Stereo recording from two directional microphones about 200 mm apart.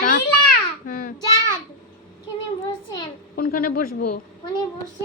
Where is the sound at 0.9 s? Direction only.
40° left (ahead or behind).